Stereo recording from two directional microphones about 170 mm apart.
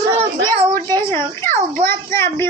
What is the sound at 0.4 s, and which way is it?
Child singing, 25° right (ahead or behind).